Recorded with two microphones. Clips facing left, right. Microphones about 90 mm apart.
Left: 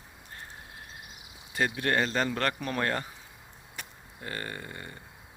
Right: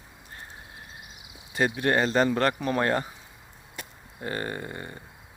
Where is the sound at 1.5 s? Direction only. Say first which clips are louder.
Right 4 dB; 20° right (ahead or behind).